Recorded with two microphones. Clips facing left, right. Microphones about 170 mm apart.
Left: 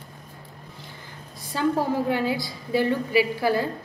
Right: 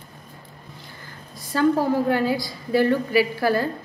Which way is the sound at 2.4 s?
20° left (ahead or behind).